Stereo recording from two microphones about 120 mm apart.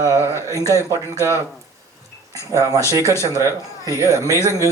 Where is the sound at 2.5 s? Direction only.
30° right (ahead or behind).